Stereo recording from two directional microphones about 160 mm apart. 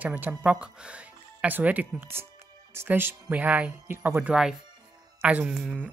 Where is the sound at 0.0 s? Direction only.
10° right (ahead or behind).